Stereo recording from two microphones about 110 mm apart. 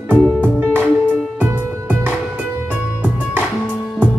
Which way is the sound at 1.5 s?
20° right (ahead or behind).